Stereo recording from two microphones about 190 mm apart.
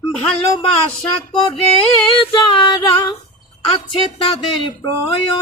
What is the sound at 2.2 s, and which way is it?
Speech, 25° left (ahead or behind).